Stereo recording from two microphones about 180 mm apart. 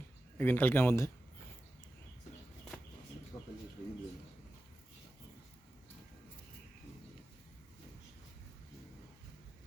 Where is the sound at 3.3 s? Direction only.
20° left (ahead or behind).